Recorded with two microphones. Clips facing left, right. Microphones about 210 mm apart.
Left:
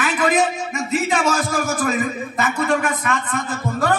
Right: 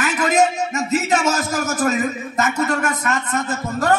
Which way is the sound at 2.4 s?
45° right (ahead or behind).